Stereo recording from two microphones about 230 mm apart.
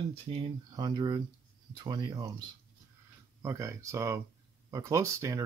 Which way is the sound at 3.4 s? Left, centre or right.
Centre.